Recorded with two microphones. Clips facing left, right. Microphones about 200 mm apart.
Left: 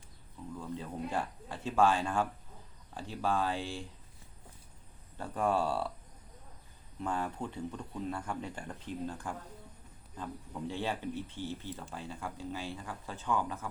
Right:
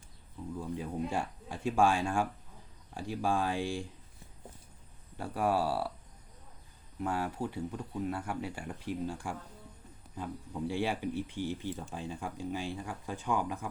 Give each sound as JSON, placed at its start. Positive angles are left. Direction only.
{"t": 0.6, "sound": "speech", "side_deg": -15}
{"t": 5.1, "sound": "speech", "side_deg": -10}
{"t": 7.0, "sound": "speech", "side_deg": -10}
{"t": 10.7, "sound": "speech", "side_deg": -10}